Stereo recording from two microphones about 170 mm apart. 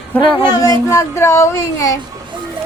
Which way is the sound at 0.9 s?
15° left (ahead or behind).